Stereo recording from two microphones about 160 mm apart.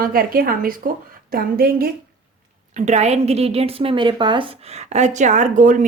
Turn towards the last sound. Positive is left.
turn(degrees=-50)  # may be behind; listen again after turning